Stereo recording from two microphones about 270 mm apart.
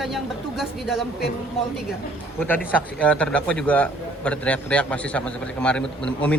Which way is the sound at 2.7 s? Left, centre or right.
Centre.